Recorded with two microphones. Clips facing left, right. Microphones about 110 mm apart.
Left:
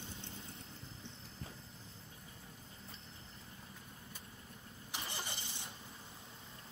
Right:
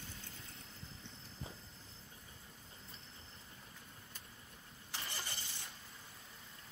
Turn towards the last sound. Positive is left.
turn(degrees=20)  # may be behind; listen again after turning